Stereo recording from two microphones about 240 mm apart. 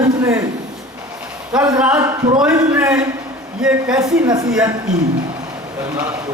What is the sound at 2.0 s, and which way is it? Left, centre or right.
Speech, centre.